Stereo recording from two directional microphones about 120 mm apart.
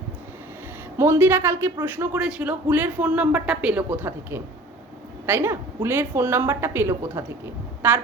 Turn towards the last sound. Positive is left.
turn(degrees=-15)  # may be behind; listen again after turning